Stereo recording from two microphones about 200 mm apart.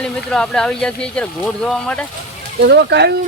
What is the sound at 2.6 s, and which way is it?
Speech, 55° right (ahead or behind).